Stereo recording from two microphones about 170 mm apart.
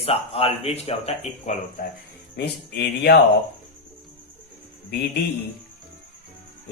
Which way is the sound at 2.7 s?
70° left (ahead or behind).